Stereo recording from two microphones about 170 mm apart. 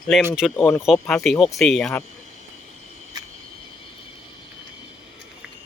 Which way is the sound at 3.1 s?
25° right (ahead or behind).